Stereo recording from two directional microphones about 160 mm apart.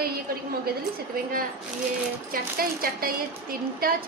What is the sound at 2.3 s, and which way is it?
A woman's voice, 65° right (ahead or behind).